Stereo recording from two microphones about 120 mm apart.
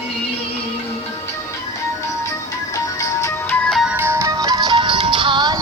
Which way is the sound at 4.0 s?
20° right (ahead or behind).